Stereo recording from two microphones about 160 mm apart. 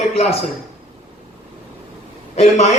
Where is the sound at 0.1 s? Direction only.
40° left (ahead or behind).